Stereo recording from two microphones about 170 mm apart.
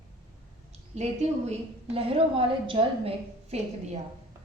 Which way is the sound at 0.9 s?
40° right (ahead or behind).